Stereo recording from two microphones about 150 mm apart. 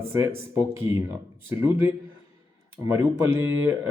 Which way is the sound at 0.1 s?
15° right (ahead or behind).